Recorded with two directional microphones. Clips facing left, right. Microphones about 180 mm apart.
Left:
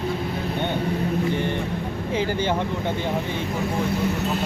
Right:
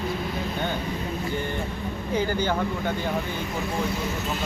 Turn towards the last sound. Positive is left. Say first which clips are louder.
# left 2 dB
turn(degrees=30)  # may be behind; listen again after turning